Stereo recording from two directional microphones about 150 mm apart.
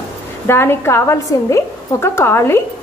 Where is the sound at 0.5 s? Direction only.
15° left (ahead or behind).